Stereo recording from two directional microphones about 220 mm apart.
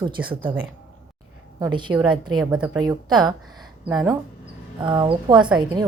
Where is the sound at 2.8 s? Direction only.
20° right (ahead or behind).